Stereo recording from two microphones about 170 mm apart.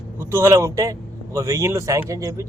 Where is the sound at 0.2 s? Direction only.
15° right (ahead or behind).